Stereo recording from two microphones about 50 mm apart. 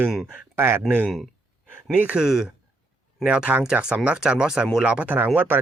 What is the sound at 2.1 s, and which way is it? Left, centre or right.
Speech, centre.